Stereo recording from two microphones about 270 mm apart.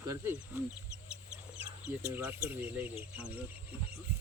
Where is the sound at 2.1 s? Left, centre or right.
Centre.